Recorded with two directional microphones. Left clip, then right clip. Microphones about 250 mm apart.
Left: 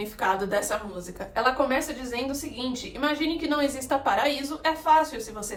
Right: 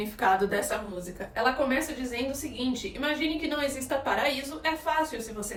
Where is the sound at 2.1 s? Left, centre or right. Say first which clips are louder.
Left 3 dB; centre.